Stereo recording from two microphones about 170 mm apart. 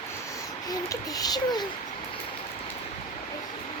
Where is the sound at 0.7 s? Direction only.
20° left (ahead or behind).